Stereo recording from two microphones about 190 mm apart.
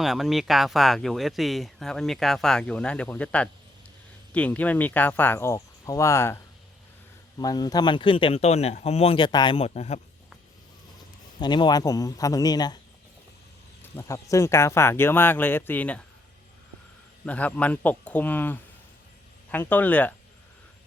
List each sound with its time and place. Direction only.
0.0 s speech: centre (ahead or behind); by 10.0 s 35° left (ahead or behind)
11.3 s speech: 25° left (ahead or behind)
13.9 s speech: 15° left (ahead or behind)
17.2 s speech: 5° left (ahead or behind)